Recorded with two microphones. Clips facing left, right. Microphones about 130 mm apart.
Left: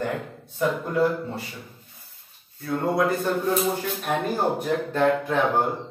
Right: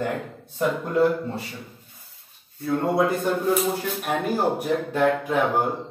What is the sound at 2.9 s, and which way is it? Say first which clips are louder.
Speech: even; 25° right (ahead or behind).